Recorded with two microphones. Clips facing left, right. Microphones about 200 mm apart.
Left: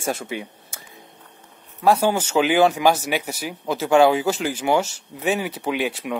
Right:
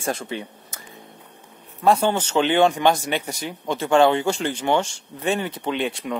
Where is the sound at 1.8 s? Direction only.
5° left (ahead or behind).